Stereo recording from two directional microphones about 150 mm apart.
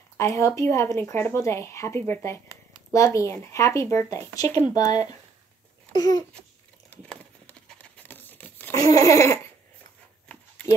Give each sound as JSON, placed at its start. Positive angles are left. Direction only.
{"t": 0.2, "sound": "speech", "side_deg": 20}
{"t": 6.9, "sound": "crumpling", "side_deg": 10}
{"t": 8.8, "sound": "speech", "side_deg": 20}